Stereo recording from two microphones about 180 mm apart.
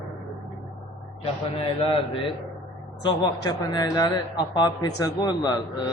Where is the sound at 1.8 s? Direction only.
30° left (ahead or behind).